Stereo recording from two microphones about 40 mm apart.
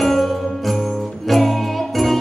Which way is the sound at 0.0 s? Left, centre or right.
Centre.